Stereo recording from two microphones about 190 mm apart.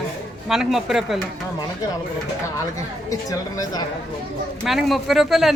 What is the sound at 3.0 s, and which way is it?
Speech, 20° left (ahead or behind).